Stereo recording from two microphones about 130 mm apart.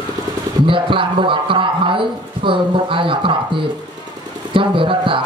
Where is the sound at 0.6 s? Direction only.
40° right (ahead or behind).